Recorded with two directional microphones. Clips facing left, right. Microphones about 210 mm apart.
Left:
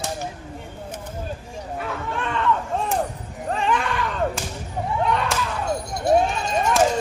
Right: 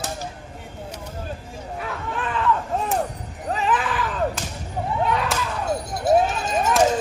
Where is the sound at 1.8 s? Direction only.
Centre (ahead or behind).